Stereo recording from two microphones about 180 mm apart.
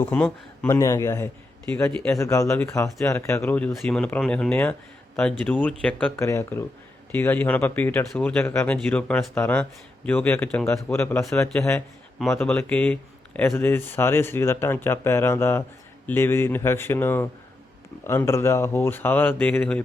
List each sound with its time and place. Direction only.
0.0 s speech: 10° left (ahead or behind)